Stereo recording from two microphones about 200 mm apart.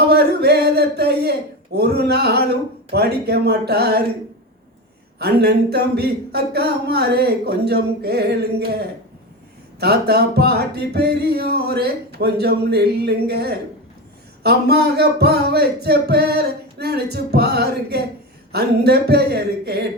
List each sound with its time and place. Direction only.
0.1 s speech: 55° right (ahead or behind)
2.9 s music: 55° right (ahead or behind)
5.2 s music: 55° right (ahead or behind)